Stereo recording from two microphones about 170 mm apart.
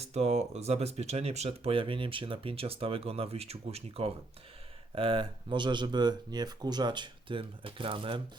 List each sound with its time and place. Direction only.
0.0 s speech: 40° right (ahead or behind)